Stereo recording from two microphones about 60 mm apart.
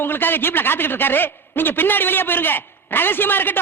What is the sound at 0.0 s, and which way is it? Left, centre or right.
A man's voice, left.